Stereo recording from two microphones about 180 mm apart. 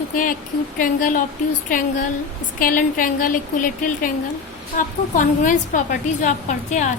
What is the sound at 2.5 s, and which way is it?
A woman's voice, 50° left (ahead or behind).